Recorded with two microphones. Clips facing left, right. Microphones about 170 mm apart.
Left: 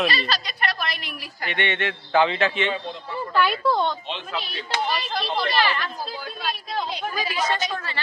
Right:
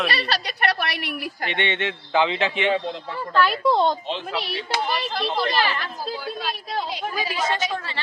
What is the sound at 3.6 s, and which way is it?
Speech, 20° right (ahead or behind).